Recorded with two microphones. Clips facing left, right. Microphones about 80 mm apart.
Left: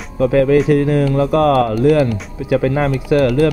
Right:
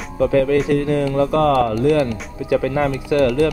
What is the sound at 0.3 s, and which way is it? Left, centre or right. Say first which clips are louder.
Speech: left 5 dB; left.